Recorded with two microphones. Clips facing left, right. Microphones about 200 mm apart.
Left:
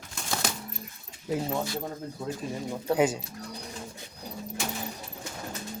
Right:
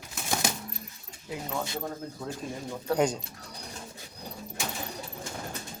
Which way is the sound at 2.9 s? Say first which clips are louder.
Left 1 dB; 5° left (ahead or behind).